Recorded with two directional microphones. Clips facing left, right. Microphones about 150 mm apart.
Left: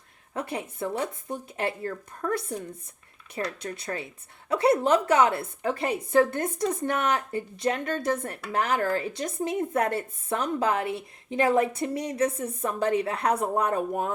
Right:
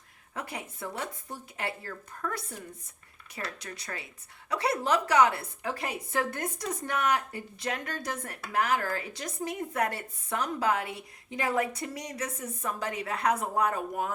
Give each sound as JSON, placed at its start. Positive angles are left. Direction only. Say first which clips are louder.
{"t": 0.3, "sound": "a woman's voice", "louder": "left 7 dB", "side_deg": 25}
{"t": 3.6, "sound": "a woman's voice", "louder": "left 7 dB", "side_deg": 25}